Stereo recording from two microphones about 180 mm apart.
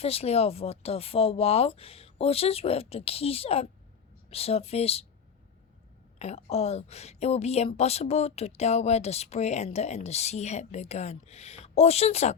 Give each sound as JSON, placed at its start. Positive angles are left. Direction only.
{"t": 0.0, "sound": "speech", "side_deg": 35}
{"t": 6.1, "sound": "speech", "side_deg": 35}